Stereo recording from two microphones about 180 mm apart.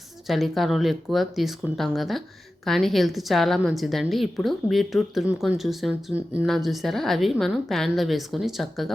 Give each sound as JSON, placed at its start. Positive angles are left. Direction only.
{"t": 0.3, "sound": "a woman's voice", "side_deg": 0}